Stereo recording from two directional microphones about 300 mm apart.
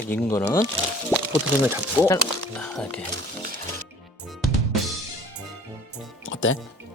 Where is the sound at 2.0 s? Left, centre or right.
Centre.